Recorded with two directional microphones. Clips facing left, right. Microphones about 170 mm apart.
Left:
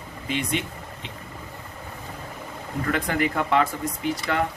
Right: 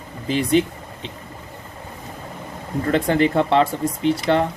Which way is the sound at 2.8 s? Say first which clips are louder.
Right 7 dB; 30° right (ahead or behind).